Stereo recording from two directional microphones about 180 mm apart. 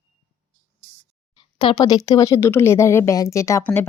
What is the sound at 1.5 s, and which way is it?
Speech, 25° left (ahead or behind).